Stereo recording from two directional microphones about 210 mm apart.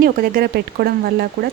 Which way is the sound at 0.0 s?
45° right (ahead or behind).